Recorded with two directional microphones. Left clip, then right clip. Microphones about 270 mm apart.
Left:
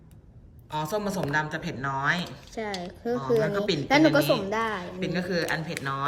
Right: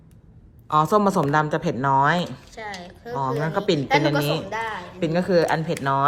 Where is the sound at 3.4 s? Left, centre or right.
Centre.